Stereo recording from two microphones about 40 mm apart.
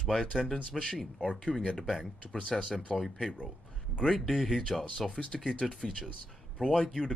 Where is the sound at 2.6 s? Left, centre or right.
Left.